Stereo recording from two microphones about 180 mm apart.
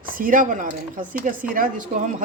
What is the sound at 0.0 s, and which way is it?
Speech, 50° right (ahead or behind).